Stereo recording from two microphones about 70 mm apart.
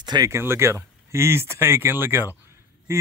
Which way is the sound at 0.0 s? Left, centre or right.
Right.